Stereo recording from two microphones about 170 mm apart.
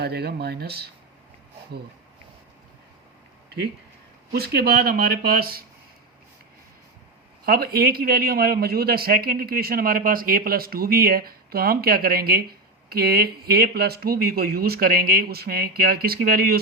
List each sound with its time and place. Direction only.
0.0 s speech: 70° right (ahead or behind)
4.3 s a man's voice: 65° right (ahead or behind)
7.4 s a man's voice: 60° right (ahead or behind)